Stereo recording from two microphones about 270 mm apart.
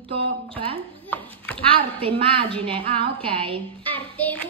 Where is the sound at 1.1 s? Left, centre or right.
Centre.